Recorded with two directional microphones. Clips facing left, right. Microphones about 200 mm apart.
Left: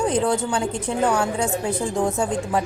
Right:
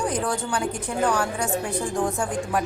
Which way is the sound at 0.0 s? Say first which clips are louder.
Left 5 dB; 25° left (ahead or behind).